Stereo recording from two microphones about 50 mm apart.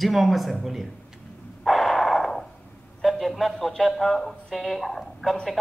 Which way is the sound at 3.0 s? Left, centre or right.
Centre.